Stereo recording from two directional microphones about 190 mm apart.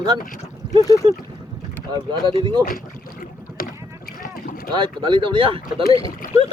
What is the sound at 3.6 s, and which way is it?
Rowboat, 50° left (ahead or behind).